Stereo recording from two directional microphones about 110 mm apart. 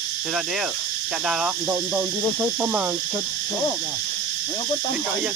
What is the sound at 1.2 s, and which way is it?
Speech, 5° right (ahead or behind).